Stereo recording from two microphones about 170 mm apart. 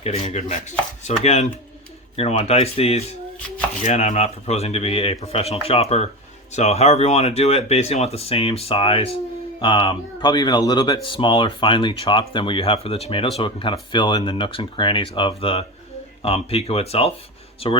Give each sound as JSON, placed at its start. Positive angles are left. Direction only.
{"t": 0.0, "sound": "speech", "side_deg": 35}